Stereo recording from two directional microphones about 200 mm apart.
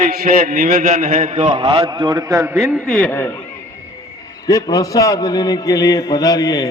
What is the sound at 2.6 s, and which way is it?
Speech, 5° right (ahead or behind).